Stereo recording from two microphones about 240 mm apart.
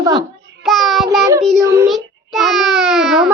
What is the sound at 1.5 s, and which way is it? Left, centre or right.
Speech, centre.